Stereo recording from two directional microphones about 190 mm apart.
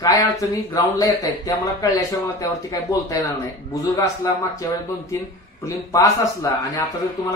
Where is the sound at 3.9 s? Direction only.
15° left (ahead or behind).